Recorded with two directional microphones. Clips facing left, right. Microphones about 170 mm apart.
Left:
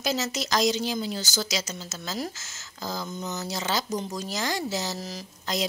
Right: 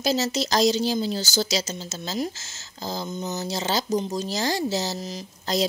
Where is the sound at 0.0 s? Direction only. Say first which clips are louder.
Right 5 dB; 30° right (ahead or behind).